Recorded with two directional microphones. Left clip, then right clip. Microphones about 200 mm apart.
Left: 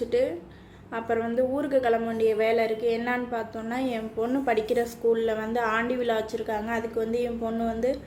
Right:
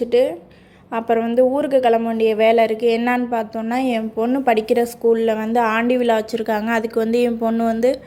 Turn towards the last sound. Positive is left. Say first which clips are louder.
# right 9 dB
turn(degrees=-45)  # may be behind; listen again after turning